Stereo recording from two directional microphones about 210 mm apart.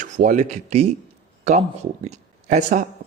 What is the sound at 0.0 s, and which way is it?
Speech, 40° right (ahead or behind).